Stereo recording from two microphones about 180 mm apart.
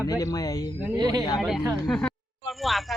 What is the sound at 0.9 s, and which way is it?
Speech, 20° right (ahead or behind).